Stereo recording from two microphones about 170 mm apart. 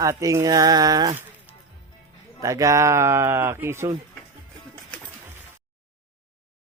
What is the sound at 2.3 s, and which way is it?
Speech, 20° right (ahead or behind).